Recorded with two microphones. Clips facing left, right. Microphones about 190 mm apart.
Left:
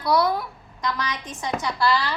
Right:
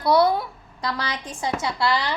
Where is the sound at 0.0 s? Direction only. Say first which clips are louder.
Right 3 dB; 30° right (ahead or behind).